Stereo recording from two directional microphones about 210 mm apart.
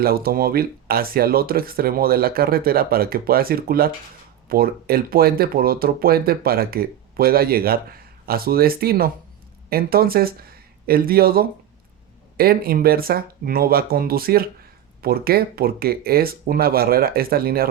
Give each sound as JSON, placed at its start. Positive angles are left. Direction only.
{"t": 0.0, "sound": "speech", "side_deg": -45}